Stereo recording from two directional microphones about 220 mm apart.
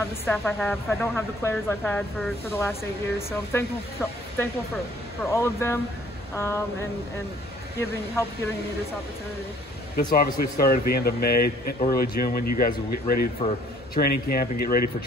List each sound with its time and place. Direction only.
0.2 s speech: 10° left (ahead or behind)
10.1 s speech: 40° left (ahead or behind)
13.4 s a man's voice: 25° left (ahead or behind)
13.9 s speech: 45° left (ahead or behind)